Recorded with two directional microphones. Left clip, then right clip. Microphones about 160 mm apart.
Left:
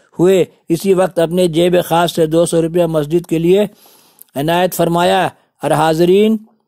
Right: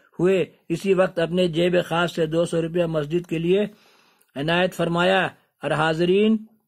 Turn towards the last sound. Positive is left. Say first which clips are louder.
# left 9 dB
turn(degrees=40)  # may be behind; listen again after turning